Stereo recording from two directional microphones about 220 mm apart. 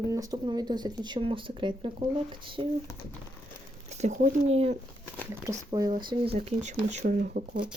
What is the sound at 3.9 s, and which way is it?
Speech, 30° right (ahead or behind).